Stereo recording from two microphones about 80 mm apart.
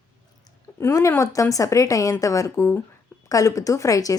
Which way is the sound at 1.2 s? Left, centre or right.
Left.